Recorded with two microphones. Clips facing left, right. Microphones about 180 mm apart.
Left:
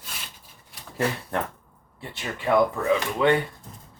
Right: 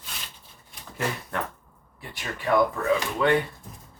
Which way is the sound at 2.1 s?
25° left (ahead or behind).